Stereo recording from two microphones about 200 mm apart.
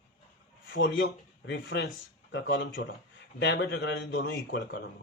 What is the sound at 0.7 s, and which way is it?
Speech, 70° left (ahead or behind).